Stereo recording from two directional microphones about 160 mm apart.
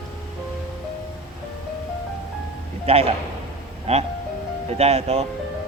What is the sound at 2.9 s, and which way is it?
Speech, 40° right (ahead or behind).